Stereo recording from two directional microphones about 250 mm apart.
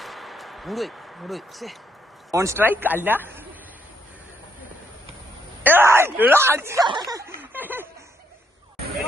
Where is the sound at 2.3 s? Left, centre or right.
Centre.